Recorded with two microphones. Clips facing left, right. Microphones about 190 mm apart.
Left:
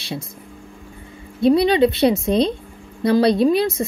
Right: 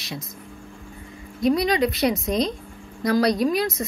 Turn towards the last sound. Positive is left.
turn(degrees=30)  # may be behind; listen again after turning